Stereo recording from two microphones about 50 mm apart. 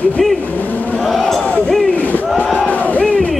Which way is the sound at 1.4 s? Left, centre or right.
Left.